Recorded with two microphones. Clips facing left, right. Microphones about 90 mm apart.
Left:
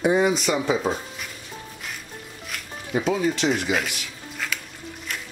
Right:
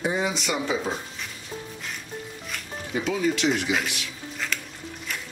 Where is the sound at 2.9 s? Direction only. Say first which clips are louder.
Left 2 dB; 40° left (ahead or behind).